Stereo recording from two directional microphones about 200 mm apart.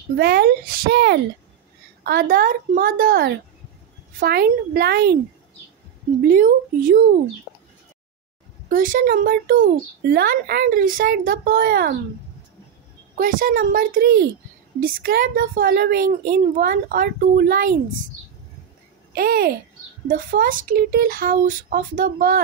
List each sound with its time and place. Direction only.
0.2 s a child's voice: 50° right (ahead or behind)
6.2 s a child's voice: 45° right (ahead or behind)
8.6 s a woman's voice: 40° right (ahead or behind)
13.2 s a child's voice: 45° right (ahead or behind)
19.1 s a child's voice: 50° right (ahead or behind)